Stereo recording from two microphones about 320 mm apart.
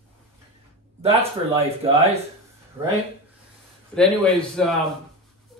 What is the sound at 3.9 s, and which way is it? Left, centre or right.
Speech, centre.